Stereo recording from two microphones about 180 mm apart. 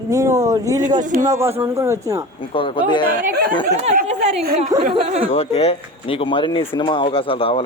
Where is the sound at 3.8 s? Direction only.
40° right (ahead or behind).